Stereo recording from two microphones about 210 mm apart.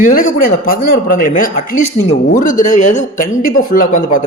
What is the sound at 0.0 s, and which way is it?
A man's voice, 40° left (ahead or behind).